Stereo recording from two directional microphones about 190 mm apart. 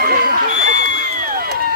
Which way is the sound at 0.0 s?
50° right (ahead or behind).